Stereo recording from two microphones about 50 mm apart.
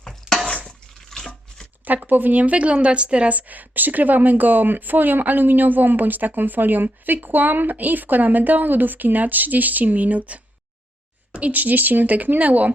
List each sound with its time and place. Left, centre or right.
0.0 s a sound: centre
1.1 s chopping: centre
1.8 s a woman's voice: right